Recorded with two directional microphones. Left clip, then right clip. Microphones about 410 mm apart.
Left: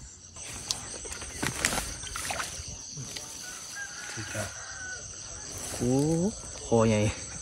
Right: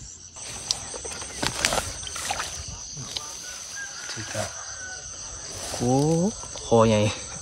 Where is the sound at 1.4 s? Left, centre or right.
Centre.